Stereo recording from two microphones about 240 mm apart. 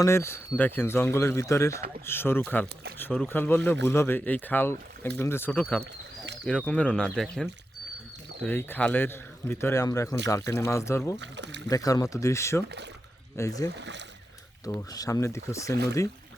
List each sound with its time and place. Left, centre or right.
0.0 s speech: centre
5.8 s bird: right
6.4 s speech: centre
11.2 s speech: right
11.7 s speech: centre
12.6 s speech: right
13.3 s speech: centre
13.7 s speech: right
14.6 s speech: centre